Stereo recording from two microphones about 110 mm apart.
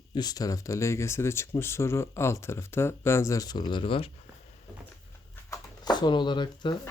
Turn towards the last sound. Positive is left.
turn(degrees=45)  # may be behind; listen again after turning